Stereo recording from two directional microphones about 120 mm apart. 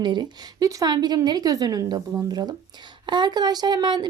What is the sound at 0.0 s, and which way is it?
A woman's voice, 35° right (ahead or behind).